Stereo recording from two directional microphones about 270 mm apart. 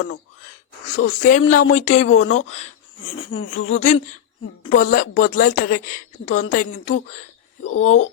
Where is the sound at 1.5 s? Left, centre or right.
Left.